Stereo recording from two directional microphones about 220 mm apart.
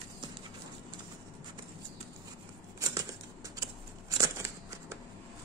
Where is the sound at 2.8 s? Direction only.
15° right (ahead or behind).